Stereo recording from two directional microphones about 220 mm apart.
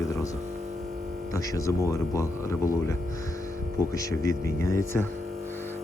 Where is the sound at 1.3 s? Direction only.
15° left (ahead or behind).